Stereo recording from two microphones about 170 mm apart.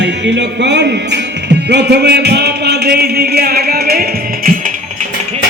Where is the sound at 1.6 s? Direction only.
75° right (ahead or behind).